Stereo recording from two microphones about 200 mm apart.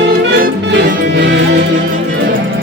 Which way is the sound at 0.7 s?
60° right (ahead or behind).